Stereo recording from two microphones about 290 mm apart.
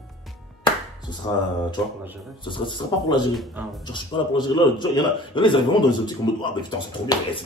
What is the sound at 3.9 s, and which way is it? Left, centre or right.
A man's voice, centre.